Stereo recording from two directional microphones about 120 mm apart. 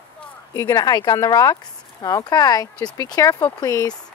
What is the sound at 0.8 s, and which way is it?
Speech, 35° left (ahead or behind).